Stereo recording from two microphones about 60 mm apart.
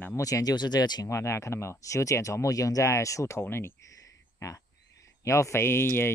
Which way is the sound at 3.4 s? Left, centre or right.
Left.